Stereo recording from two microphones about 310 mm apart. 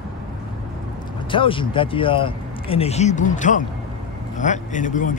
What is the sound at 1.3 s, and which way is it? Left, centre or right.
Speech, centre.